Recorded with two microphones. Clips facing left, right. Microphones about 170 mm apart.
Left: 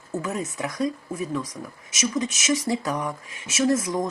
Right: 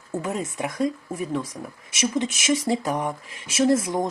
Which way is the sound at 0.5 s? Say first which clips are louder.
Right 1 dB; 25° right (ahead or behind).